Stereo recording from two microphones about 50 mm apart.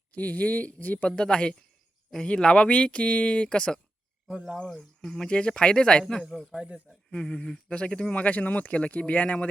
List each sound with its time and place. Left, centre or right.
0.1 s speech: left
1.0 s speech: centre
4.3 s cricket: centre
4.6 s a man's voice: centre
5.0 s speech: centre
6.2 s a man's voice: centre
6.6 s cricket: right
7.1 s speech: centre